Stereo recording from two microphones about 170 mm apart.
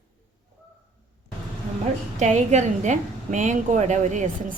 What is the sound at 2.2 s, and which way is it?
A woman's voice, 45° right (ahead or behind).